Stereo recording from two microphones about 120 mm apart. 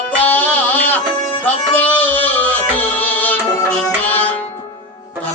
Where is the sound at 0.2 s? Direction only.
15° left (ahead or behind).